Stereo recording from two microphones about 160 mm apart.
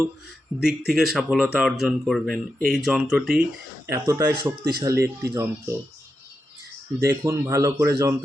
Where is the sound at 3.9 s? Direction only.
15° right (ahead or behind).